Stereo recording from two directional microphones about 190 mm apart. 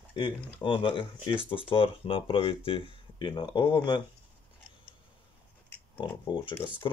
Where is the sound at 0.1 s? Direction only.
25° left (ahead or behind).